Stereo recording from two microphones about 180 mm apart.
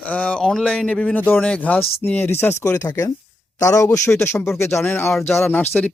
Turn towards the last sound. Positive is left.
turn(degrees=10)  # may be behind; listen again after turning